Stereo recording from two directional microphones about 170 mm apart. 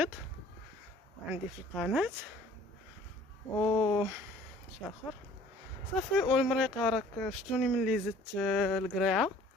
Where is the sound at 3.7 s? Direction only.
25° left (ahead or behind).